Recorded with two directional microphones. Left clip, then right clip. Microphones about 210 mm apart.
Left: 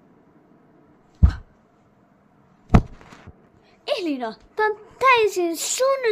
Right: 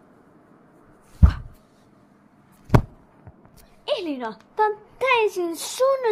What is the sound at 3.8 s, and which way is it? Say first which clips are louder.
A child's voice: left 1 dB; 20° left (ahead or behind).